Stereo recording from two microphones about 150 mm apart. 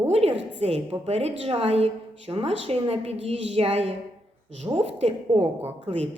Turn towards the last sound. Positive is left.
turn(degrees=-45)  # may be behind; listen again after turning